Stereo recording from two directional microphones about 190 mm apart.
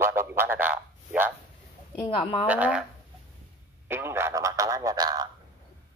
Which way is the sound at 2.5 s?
5° right (ahead or behind).